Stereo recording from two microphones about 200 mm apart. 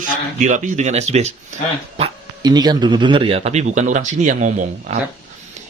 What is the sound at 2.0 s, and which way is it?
Speech, 20° right (ahead or behind).